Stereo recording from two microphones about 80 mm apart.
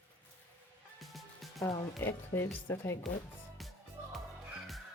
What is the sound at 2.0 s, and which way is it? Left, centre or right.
Speech, left.